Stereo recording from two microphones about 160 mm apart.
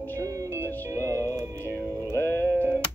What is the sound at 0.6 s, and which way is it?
Music, 15° left (ahead or behind).